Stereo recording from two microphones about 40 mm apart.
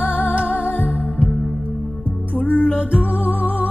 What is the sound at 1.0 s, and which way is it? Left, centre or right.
Music, left.